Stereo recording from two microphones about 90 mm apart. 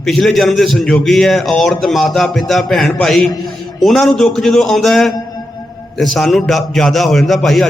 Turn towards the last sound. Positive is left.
turn(degrees=0)  # may be behind; listen again after turning